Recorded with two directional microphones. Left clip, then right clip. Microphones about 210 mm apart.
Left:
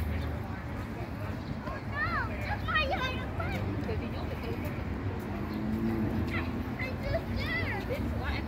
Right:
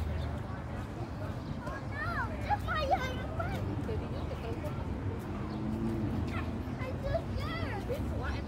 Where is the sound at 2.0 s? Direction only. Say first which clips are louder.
Left 5 dB; 35° right (ahead or behind).